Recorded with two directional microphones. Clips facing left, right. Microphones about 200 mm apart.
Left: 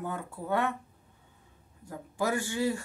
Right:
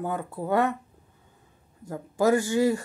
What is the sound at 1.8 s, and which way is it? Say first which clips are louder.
Speech: right 8 dB; 45° right (ahead or behind).